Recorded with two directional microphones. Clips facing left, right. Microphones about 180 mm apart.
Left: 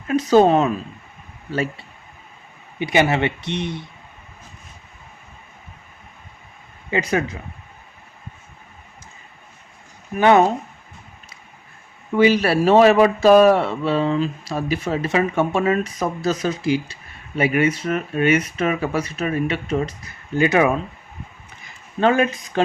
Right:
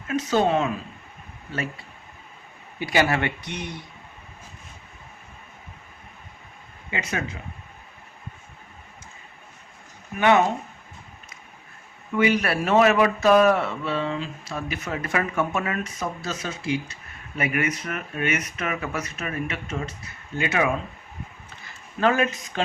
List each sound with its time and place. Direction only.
0.1 s speech: 35° left (ahead or behind)
2.7 s speech: 20° left (ahead or behind)
6.9 s speech: 35° left (ahead or behind)
10.2 s speech: 35° left (ahead or behind)
12.1 s speech: 30° left (ahead or behind)
16.0 s speech: 40° left (ahead or behind)
22.0 s speech: 30° left (ahead or behind)